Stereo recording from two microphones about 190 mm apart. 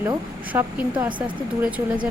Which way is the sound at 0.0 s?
10° right (ahead or behind).